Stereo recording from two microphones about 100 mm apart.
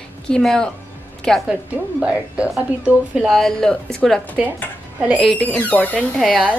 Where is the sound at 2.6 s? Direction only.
10° right (ahead or behind).